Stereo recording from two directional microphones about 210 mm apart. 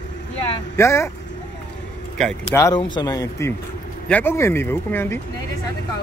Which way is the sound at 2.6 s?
20° left (ahead or behind).